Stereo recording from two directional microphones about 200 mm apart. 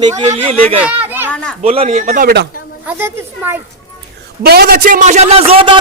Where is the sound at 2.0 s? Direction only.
40° right (ahead or behind).